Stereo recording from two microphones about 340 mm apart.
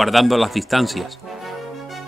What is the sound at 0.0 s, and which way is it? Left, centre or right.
Speech, centre.